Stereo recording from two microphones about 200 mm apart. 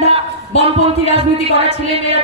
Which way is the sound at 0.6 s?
30° right (ahead or behind).